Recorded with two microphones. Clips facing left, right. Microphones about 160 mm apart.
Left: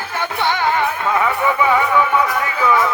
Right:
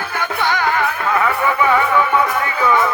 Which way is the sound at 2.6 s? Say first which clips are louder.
Even; 5° left (ahead or behind).